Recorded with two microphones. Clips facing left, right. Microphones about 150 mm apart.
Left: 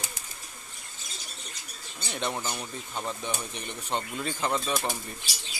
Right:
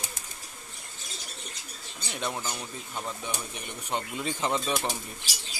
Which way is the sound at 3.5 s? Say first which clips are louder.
Left 1 dB; 10° right (ahead or behind).